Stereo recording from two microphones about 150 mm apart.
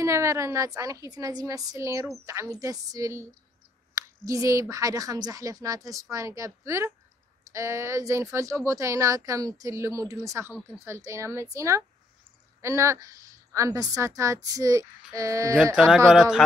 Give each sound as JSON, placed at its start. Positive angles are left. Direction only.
{"t": 0.0, "sound": "speech", "side_deg": -20}
{"t": 16.2, "sound": "speech", "side_deg": -5}